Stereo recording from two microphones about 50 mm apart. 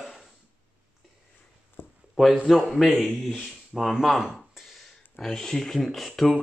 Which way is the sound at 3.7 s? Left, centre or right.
Centre.